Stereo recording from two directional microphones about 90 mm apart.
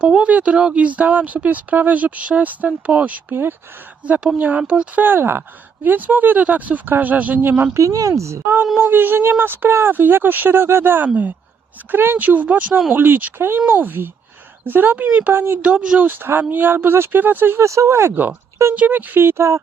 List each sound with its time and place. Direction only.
0.0 s speech: 10° right (ahead or behind)
7.8 s speech: 40° right (ahead or behind)
15.6 s speech: 10° right (ahead or behind); by 19.6 s 30° right (ahead or behind)